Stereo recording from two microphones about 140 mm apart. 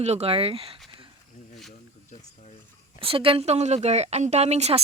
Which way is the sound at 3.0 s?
40° right (ahead or behind).